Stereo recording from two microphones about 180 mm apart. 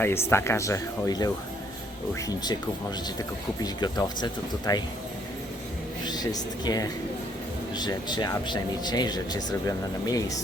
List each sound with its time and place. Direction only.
0.0 s speech: 15° left (ahead or behind)
3.6 s speech: 25° left (ahead or behind)
6.1 s speech: 20° left (ahead or behind)